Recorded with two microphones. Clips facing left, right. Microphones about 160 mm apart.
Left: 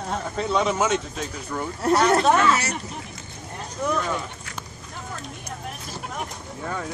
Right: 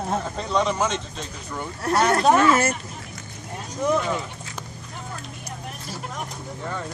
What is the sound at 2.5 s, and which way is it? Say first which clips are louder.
Speech: right 3 dB; 50° right (ahead or behind).